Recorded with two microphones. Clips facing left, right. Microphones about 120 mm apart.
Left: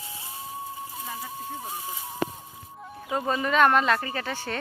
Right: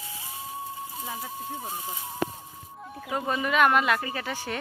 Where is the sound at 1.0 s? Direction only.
5° right (ahead or behind).